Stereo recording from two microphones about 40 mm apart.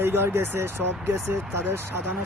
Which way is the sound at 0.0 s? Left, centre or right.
Right.